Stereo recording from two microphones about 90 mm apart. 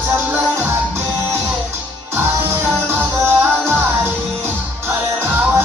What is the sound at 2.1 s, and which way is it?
Music, 25° right (ahead or behind).